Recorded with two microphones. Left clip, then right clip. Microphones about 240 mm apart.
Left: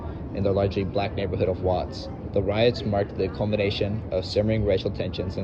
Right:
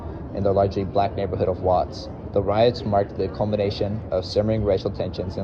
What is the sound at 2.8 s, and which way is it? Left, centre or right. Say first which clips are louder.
Speech: right 4 dB; right.